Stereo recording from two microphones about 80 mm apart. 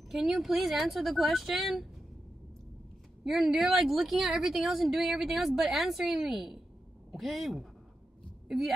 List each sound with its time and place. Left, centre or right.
0.1 s a woman's voice: centre
3.3 s a woman's voice: centre